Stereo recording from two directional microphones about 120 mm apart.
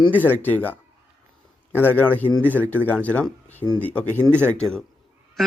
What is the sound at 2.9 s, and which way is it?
A man's voice, 15° left (ahead or behind).